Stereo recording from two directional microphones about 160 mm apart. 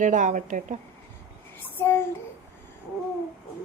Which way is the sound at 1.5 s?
15° left (ahead or behind).